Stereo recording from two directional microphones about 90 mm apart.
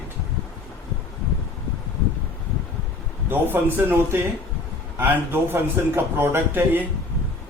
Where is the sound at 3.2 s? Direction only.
25° right (ahead or behind).